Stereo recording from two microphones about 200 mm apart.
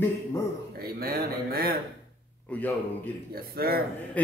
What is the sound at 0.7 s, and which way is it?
A man's voice, 50° right (ahead or behind).